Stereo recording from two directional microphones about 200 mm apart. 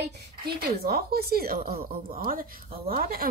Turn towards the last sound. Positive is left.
turn(degrees=-45)  # may be behind; listen again after turning